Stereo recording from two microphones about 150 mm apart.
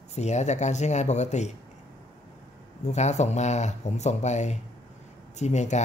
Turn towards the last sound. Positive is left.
turn(degrees=50)  # may be behind; listen again after turning